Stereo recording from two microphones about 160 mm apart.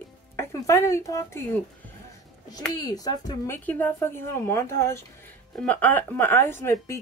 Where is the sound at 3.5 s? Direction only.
10° left (ahead or behind).